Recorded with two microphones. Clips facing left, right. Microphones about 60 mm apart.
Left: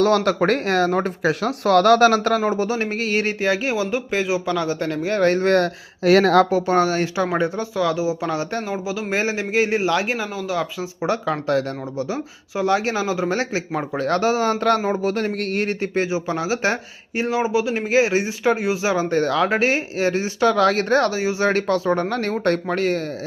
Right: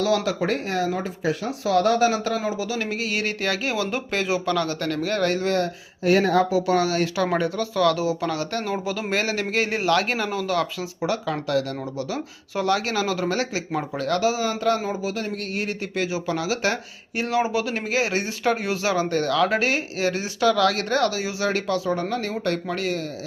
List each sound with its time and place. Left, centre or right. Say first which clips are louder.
0.0 s speech: left 5 dB; left
2.4 s speech: left 5 dB; left
3.4 s speech: left 3 dB; left
3.9 s speech: left 3 dB; centre; by 5.7 s left
6.1 s speech: left 5 dB; left
6.5 s speech: left 3 dB; left
8.7 s speech: left 1 dB; centre
9.0 s speech: left 3 dB; centre
10.2 s speech: even; centre
10.8 s speech: left 3 dB; left